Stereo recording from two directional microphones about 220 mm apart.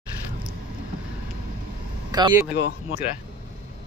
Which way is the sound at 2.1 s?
20° right (ahead or behind).